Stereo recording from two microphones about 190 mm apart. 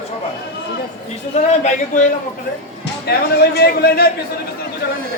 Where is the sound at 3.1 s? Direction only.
60° left (ahead or behind).